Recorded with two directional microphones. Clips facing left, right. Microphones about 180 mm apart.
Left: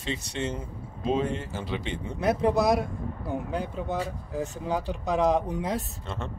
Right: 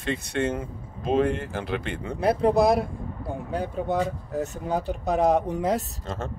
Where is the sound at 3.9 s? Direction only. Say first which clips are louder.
Right 7 dB; 55° right (ahead or behind).